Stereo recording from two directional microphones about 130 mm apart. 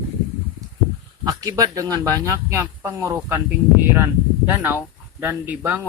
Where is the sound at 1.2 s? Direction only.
30° right (ahead or behind).